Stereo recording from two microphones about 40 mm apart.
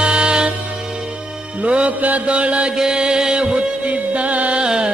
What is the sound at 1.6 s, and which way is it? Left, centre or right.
Music, right.